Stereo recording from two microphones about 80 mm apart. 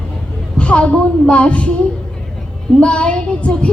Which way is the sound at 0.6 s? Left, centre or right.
Centre.